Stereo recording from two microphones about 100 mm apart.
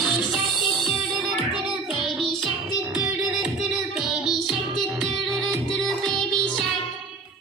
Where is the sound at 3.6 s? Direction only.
5° right (ahead or behind).